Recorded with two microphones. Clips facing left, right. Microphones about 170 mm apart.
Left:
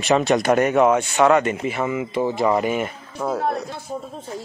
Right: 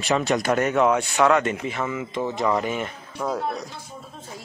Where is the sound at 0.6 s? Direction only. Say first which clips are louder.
Left 3 dB; 10° left (ahead or behind).